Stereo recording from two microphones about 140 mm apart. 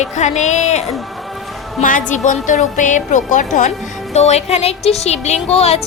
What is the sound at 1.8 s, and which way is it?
Speech, 65° left (ahead or behind).